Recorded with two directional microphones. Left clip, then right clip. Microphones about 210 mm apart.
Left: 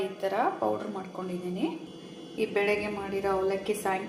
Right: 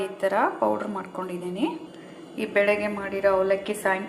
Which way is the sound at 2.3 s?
20° right (ahead or behind).